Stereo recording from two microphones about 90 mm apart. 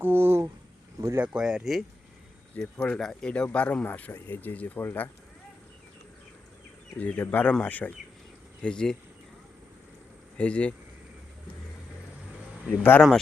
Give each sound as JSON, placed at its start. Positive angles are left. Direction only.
{"t": 0.0, "sound": "speech", "side_deg": -25}
{"t": 1.2, "sound": "speech", "side_deg": -10}
{"t": 2.6, "sound": "speech", "side_deg": 10}
{"t": 7.0, "sound": "speech", "side_deg": 20}
{"t": 10.3, "sound": "speech", "side_deg": 15}
{"t": 12.6, "sound": "speech", "side_deg": 20}